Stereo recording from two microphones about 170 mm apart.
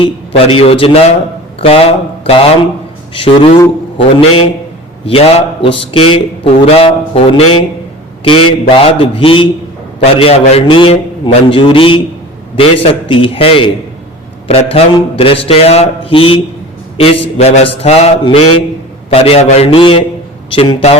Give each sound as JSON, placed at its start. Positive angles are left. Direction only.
{"t": 0.0, "sound": "a man's voice", "side_deg": 35}
{"t": 3.9, "sound": "a man's voice", "side_deg": 35}